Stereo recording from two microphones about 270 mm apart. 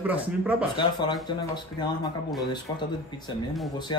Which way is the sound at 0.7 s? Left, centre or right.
Centre.